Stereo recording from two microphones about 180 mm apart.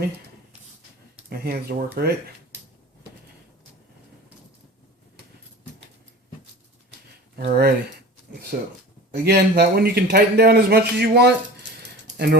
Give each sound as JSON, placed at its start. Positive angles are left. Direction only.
{"t": 1.3, "sound": "a man's voice", "side_deg": -60}
{"t": 7.3, "sound": "a man's voice", "side_deg": -60}